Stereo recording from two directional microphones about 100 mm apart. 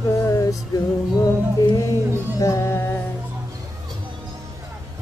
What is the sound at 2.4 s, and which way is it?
Music, 30° left (ahead or behind).